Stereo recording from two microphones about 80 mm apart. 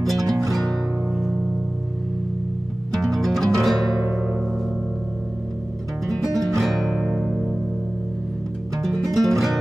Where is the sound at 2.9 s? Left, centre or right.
Centre.